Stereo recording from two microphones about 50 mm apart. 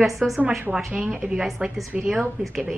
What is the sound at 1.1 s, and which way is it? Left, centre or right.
Speech, centre.